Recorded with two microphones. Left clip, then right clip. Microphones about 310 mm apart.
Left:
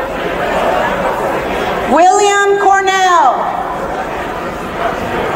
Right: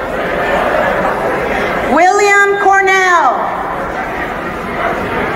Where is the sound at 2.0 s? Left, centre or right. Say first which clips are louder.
Left 1 dB; left.